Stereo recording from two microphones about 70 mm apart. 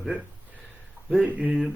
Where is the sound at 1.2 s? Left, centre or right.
Right.